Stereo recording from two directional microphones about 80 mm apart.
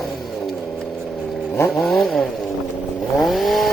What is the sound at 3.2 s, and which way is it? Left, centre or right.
Chainsaw, centre.